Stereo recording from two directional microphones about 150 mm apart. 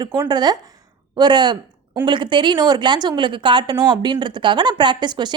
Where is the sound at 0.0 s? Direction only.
25° right (ahead or behind).